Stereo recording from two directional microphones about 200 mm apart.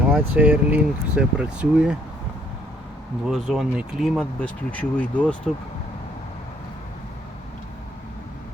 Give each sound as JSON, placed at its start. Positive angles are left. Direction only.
{"t": 0.1, "sound": "speech", "side_deg": -5}
{"t": 3.2, "sound": "speech", "side_deg": 0}